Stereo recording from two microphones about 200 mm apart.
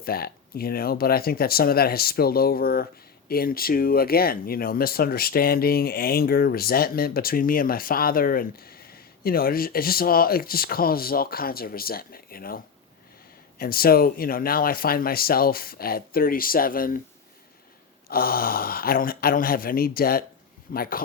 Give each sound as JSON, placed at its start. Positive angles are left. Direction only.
{"t": 0.0, "sound": "speech", "side_deg": 50}
{"t": 18.1, "sound": "speech", "side_deg": 50}